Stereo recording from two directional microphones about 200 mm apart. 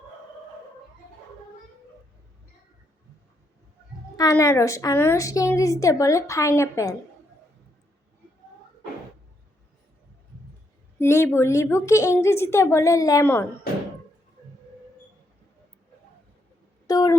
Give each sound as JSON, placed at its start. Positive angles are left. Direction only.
{"t": 4.2, "sound": "a woman's voice", "side_deg": 15}
{"t": 10.9, "sound": "a woman's voice", "side_deg": 15}
{"t": 16.8, "sound": "a sound", "side_deg": 20}